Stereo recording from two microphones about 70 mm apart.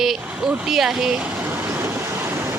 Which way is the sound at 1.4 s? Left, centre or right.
Right.